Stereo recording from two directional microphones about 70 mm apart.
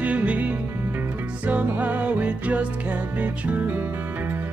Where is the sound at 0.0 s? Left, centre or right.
Centre.